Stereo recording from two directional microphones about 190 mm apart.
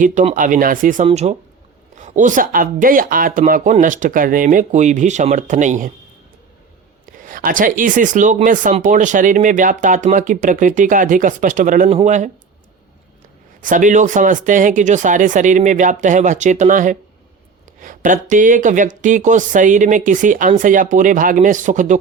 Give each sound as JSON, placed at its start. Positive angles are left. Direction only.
{"t": 0.0, "sound": "speech", "side_deg": -40}
{"t": 1.0, "sound": "speech", "side_deg": -35}
{"t": 7.0, "sound": "speech", "side_deg": -45}
{"t": 13.6, "sound": "speech", "side_deg": -45}